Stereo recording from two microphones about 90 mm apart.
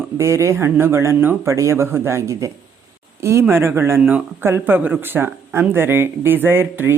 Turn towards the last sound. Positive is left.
turn(degrees=-25)  # may be behind; listen again after turning